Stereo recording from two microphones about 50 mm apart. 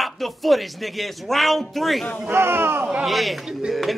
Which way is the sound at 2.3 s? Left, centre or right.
Right.